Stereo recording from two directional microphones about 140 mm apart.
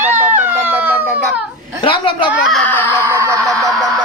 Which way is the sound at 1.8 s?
35° left (ahead or behind).